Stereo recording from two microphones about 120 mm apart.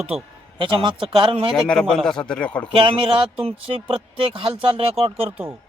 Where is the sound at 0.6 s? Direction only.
45° right (ahead or behind).